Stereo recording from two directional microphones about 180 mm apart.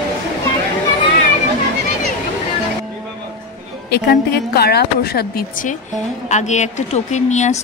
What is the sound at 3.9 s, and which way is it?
Speech, 60° left (ahead or behind).